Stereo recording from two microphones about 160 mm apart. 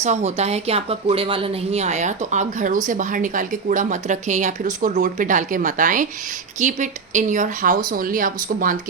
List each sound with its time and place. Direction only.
0.0 s a woman's voice: 45° right (ahead or behind)